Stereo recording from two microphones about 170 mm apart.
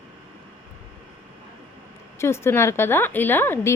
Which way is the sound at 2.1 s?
15° left (ahead or behind).